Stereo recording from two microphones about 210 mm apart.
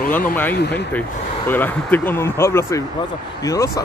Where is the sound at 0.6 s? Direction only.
55° left (ahead or behind).